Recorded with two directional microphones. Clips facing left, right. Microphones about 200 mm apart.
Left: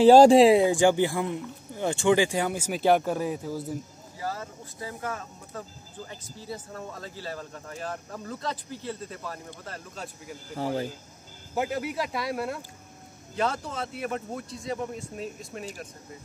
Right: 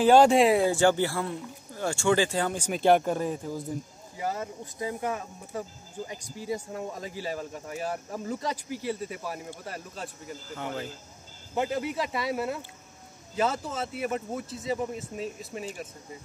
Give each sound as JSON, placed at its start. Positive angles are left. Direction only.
{"t": 0.0, "sound": "speech", "side_deg": 35}
{"t": 4.2, "sound": "speech", "side_deg": -20}
{"t": 9.9, "sound": "speech", "side_deg": 0}
{"t": 10.5, "sound": "speech", "side_deg": 35}
{"t": 11.5, "sound": "speech", "side_deg": 5}